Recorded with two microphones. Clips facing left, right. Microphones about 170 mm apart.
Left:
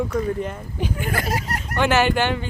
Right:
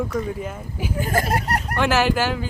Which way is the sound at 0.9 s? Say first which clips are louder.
Right 6 dB; 40° right (ahead or behind).